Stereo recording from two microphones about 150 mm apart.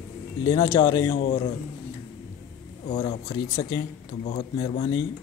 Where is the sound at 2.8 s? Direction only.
40° left (ahead or behind).